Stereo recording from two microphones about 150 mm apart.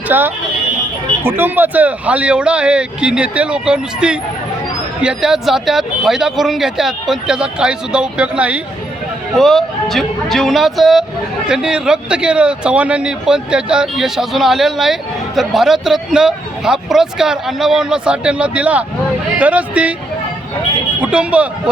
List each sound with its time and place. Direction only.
0.1 s speech: 15° right (ahead or behind)
21.0 s speech: 10° right (ahead or behind)